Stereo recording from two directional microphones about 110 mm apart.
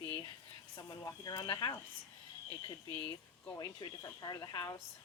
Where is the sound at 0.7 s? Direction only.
30° left (ahead or behind).